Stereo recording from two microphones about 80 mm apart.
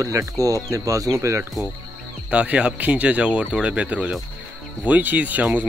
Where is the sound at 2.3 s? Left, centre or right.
Centre.